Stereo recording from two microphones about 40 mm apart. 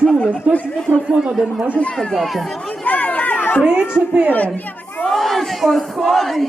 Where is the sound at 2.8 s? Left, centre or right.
Left.